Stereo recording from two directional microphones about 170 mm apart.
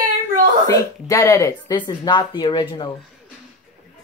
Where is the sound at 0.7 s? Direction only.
20° left (ahead or behind).